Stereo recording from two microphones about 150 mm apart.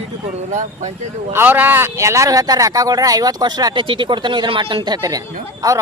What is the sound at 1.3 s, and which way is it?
Speech, 10° right (ahead or behind).